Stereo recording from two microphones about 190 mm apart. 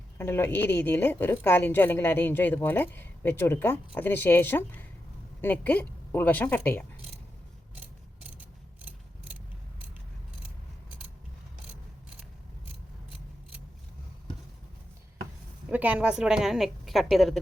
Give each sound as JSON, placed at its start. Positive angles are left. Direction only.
{"t": 0.2, "sound": "a woman's voice", "side_deg": 10}
{"t": 15.7, "sound": "a woman's voice", "side_deg": -10}